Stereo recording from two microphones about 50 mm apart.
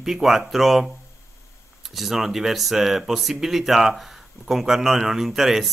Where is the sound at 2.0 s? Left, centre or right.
Centre.